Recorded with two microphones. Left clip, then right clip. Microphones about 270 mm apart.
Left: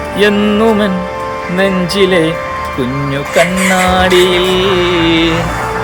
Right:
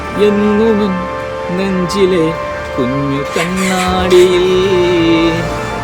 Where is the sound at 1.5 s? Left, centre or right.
Centre.